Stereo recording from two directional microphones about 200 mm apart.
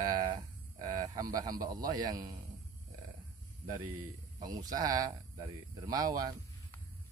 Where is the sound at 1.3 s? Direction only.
20° right (ahead or behind).